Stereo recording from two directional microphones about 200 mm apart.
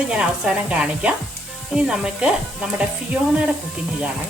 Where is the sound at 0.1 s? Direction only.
5° right (ahead or behind).